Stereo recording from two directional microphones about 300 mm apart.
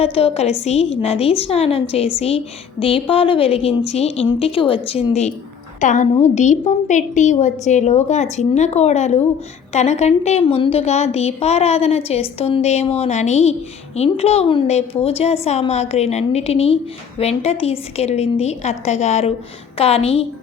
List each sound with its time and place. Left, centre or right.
0.0 s a woman's voice: centre